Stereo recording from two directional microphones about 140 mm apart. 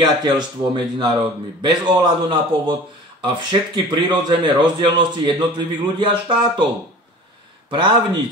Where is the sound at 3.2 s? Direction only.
30° right (ahead or behind).